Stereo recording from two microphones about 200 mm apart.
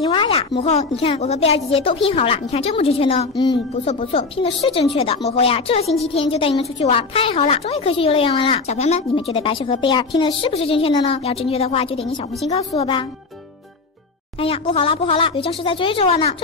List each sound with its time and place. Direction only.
0.0 s speech: 25° left (ahead or behind)
14.4 s speech: 30° left (ahead or behind)